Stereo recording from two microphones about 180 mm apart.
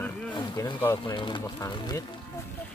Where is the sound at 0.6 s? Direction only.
15° left (ahead or behind).